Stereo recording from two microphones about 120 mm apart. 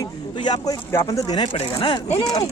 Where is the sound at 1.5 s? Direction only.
50° left (ahead or behind).